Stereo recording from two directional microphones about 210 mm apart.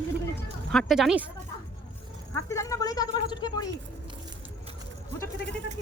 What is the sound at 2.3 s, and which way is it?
Speech, 15° left (ahead or behind).